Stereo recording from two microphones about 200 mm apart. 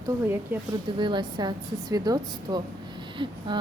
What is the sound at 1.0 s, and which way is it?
A woman's voice, 20° right (ahead or behind).